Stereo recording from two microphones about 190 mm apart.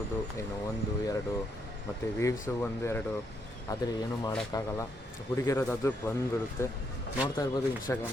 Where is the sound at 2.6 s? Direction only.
10° left (ahead or behind).